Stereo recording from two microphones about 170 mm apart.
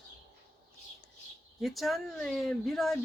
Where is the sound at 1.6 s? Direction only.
Centre (ahead or behind).